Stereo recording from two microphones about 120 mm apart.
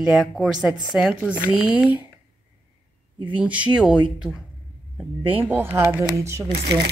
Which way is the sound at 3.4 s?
10° right (ahead or behind).